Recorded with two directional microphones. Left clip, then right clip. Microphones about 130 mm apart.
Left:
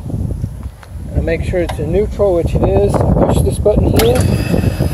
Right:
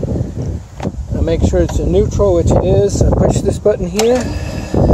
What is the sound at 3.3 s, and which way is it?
Speech, 85° right.